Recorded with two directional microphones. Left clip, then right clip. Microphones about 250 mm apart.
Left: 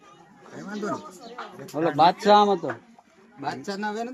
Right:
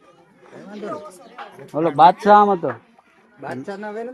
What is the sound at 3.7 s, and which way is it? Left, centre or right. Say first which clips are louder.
Speech: right 1 dB; left.